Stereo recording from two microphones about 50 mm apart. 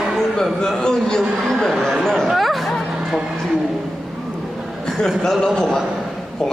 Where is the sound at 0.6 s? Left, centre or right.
Centre.